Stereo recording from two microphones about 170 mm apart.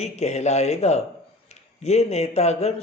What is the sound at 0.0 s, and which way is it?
Speech, 40° left (ahead or behind).